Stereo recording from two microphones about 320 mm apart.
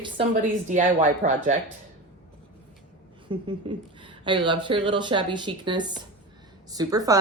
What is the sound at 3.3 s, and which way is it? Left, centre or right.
A woman's voice, centre.